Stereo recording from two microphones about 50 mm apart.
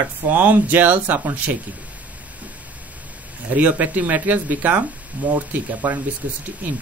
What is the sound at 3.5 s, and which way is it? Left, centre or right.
Speech, right.